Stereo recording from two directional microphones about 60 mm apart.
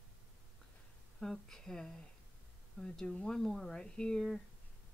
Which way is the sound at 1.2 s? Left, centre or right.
Centre.